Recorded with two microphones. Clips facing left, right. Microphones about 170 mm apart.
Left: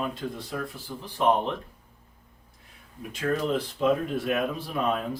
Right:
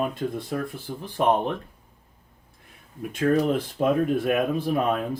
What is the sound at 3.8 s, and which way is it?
Speech, 55° right (ahead or behind).